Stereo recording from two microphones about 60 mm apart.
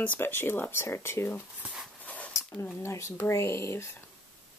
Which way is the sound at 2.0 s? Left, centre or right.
Left.